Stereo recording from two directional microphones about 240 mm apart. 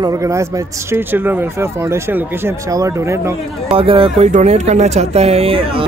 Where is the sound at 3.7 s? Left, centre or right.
Right.